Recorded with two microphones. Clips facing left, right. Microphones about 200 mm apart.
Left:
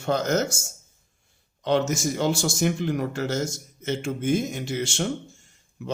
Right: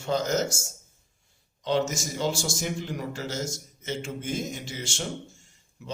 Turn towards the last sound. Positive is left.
turn(degrees=60)  # may be behind; listen again after turning